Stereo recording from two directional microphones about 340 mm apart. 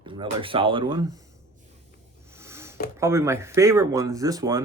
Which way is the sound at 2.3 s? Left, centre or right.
Centre.